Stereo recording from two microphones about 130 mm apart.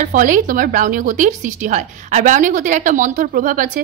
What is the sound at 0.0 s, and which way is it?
A woman's voice, 90° right.